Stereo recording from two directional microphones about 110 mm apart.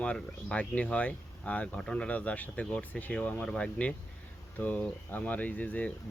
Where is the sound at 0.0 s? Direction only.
10° left (ahead or behind).